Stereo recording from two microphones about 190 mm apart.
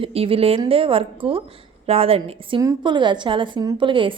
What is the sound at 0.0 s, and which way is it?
A woman's voice, 30° right (ahead or behind).